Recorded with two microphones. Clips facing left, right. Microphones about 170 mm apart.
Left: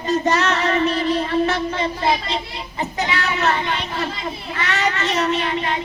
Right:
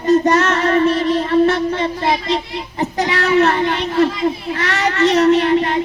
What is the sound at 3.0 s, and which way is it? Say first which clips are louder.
Speech: right 8 dB; 60° right (ahead or behind).